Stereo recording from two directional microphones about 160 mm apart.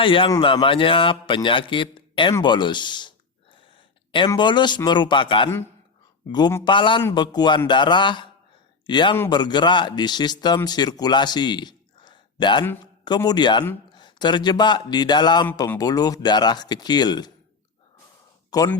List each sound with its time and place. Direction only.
0.0 s a man's voice: 35° left (ahead or behind)
2.4 s a sound: 30° left (ahead or behind)
4.3 s a man's voice: 30° left (ahead or behind)
6.7 s a man's voice: 30° left (ahead or behind)